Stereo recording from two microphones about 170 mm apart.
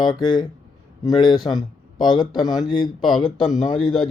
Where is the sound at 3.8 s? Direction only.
Centre (ahead or behind).